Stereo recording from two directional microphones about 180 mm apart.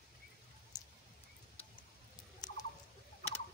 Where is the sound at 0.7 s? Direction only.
20° left (ahead or behind).